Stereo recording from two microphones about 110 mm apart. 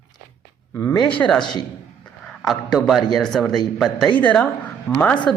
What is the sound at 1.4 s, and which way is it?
Speech, 45° left (ahead or behind).